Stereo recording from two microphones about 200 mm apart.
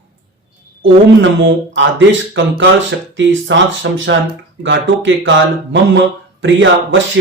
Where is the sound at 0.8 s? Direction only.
70° right (ahead or behind).